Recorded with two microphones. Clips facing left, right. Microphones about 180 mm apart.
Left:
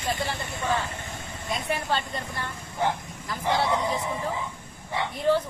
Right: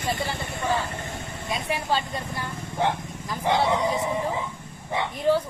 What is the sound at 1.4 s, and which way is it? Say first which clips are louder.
Speech: right 1 dB; 10° right (ahead or behind).